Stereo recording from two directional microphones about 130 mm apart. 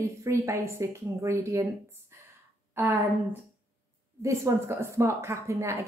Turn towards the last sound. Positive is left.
turn(degrees=-20)  # may be behind; listen again after turning